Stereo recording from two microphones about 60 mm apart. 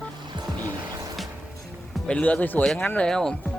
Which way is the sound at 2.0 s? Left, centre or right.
Left.